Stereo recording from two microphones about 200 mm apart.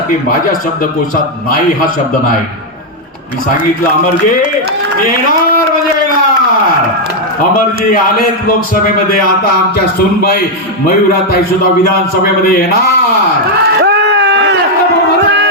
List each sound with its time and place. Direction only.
1.1 s a man's voice: 45° left (ahead or behind)
12.2 s a man's voice: 45° left (ahead or behind)
13.8 s a sound: 60° right (ahead or behind)